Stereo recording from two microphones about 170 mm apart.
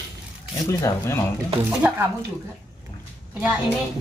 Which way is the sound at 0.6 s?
20° left (ahead or behind).